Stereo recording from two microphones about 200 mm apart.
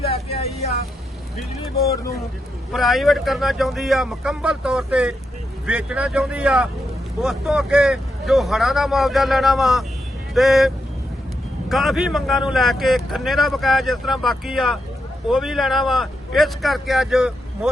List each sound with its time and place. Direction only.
0.0 s vehicle: 30° left (ahead or behind)
2.7 s speech: centre (ahead or behind)
11.7 s speech: centre (ahead or behind)